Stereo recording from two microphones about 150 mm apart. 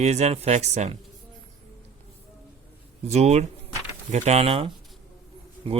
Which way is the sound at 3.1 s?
45° right (ahead or behind).